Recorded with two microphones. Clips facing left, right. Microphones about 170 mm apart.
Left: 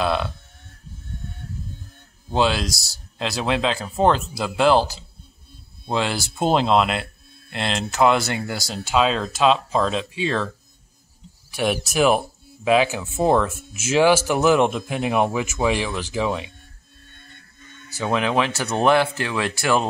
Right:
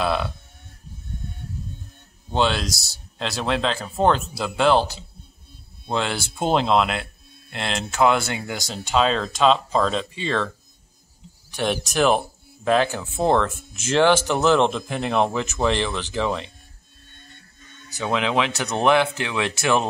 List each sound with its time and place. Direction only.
0.0 s speech: centre (ahead or behind)
2.3 s speech: centre (ahead or behind)
11.5 s speech: 5° left (ahead or behind)
17.9 s speech: centre (ahead or behind)
19.5 s speech: 20° right (ahead or behind)